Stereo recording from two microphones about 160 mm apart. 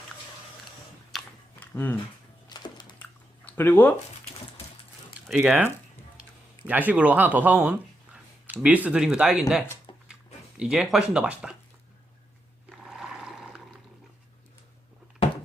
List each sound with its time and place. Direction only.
1.1 s chewing: 10° left (ahead or behind)
2.5 s a sound: 25° left (ahead or behind)
3.0 s chewing: 10° left (ahead or behind)
5.3 s speech: 5° right (ahead or behind)
10.6 s speech: 5° right (ahead or behind)
12.8 s a sound: centre (ahead or behind)